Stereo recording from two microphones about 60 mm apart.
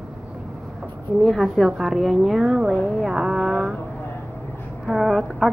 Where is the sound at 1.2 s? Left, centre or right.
Centre.